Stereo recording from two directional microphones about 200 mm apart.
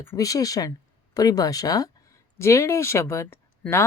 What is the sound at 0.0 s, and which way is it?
Speech, 15° left (ahead or behind).